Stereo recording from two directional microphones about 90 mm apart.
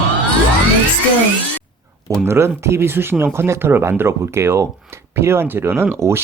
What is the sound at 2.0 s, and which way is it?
Speech, 30° right (ahead or behind).